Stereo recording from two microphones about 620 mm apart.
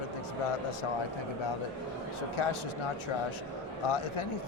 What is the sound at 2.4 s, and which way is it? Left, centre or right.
Speech, left.